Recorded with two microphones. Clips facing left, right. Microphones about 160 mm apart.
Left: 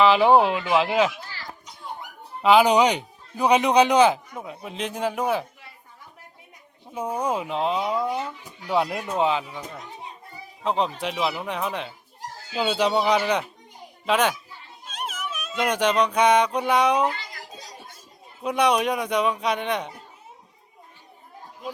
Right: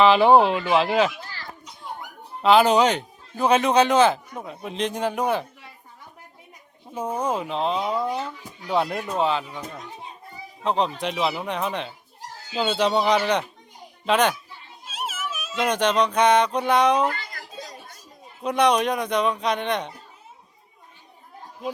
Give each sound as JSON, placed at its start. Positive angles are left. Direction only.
{"t": 0.0, "sound": "speech", "side_deg": 5}
{"t": 2.4, "sound": "speech", "side_deg": 10}
{"t": 6.9, "sound": "speech", "side_deg": 10}
{"t": 10.6, "sound": "speech", "side_deg": 5}
{"t": 14.8, "sound": "music", "side_deg": -5}
{"t": 15.6, "sound": "speech", "side_deg": 10}
{"t": 17.1, "sound": "a sound", "side_deg": -50}
{"t": 18.4, "sound": "speech", "side_deg": 10}